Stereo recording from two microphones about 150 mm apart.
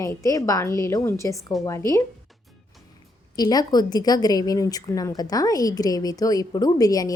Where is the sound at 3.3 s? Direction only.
25° left (ahead or behind).